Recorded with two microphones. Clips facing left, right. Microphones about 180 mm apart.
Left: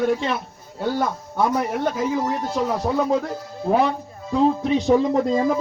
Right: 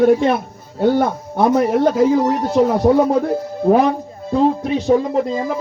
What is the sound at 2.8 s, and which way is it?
Speech, 65° right (ahead or behind).